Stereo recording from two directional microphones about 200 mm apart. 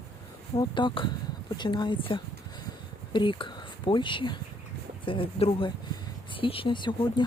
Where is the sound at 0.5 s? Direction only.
20° left (ahead or behind).